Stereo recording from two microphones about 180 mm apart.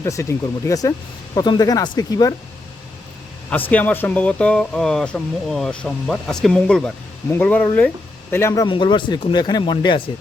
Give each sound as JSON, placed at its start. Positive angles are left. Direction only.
{"t": 0.0, "sound": "speech", "side_deg": 15}
{"t": 3.5, "sound": "speech", "side_deg": 10}
{"t": 8.6, "sound": "speech", "side_deg": 25}